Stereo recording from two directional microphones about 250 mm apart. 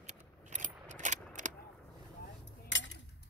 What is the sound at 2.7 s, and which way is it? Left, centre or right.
Cutlery, left.